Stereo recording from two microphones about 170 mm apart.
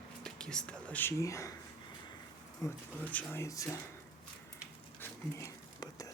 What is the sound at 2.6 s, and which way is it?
Speech, 10° left (ahead or behind).